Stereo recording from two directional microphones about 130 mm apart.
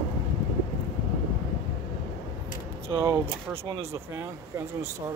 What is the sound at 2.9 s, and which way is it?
Speech, 40° right (ahead or behind).